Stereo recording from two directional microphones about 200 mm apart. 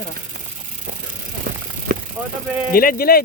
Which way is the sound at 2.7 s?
45° left (ahead or behind).